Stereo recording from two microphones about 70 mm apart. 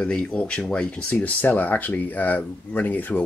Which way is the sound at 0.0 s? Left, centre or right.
Centre.